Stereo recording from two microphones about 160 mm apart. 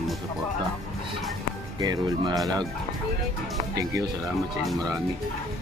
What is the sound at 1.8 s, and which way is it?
Speech, 25° right (ahead or behind).